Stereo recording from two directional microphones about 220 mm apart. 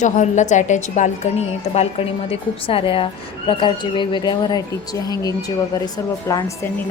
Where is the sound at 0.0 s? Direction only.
35° left (ahead or behind).